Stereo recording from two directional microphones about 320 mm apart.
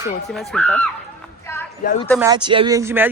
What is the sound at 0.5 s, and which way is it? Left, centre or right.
Speech, centre.